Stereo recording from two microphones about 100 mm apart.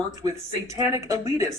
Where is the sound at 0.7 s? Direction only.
35° right (ahead or behind).